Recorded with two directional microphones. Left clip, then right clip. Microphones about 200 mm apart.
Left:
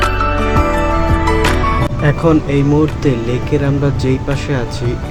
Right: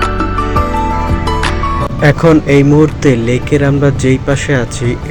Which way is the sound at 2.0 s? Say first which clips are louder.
Right 6 dB; 20° right (ahead or behind).